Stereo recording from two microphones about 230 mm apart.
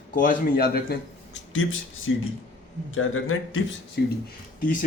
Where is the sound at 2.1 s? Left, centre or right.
Left.